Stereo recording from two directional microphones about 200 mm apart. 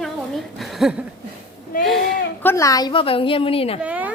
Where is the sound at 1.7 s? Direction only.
45° left (ahead or behind).